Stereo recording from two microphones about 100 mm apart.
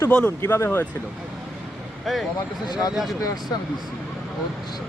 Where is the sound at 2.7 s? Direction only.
40° left (ahead or behind).